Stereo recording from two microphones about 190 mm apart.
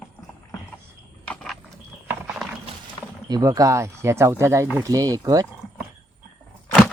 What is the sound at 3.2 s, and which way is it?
Speech, 20° right (ahead or behind).